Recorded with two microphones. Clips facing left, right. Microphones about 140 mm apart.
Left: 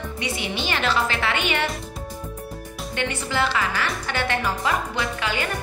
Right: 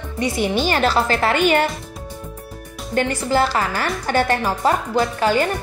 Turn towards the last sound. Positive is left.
turn(degrees=-40)  # may be behind; listen again after turning